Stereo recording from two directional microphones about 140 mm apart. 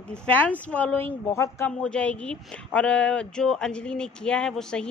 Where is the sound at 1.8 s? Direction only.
10° left (ahead or behind).